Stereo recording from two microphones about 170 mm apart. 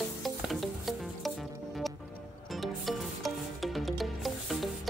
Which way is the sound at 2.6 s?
Centre (ahead or behind).